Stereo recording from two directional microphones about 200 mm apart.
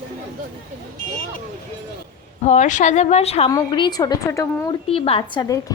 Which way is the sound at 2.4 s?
35° left (ahead or behind).